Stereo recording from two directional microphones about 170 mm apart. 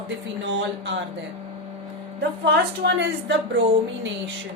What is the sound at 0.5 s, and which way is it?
Speech, 90° right.